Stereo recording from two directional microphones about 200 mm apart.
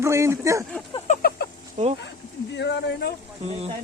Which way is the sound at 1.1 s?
50° left (ahead or behind).